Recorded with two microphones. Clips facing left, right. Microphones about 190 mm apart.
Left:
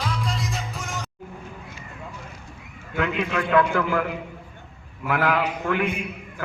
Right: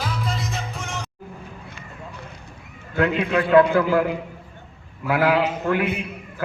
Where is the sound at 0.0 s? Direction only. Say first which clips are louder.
Right 1 dB; centre (ahead or behind).